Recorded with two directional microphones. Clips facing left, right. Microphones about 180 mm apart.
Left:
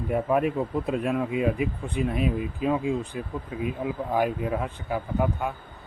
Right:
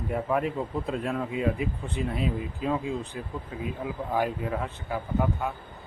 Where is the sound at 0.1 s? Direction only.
15° left (ahead or behind).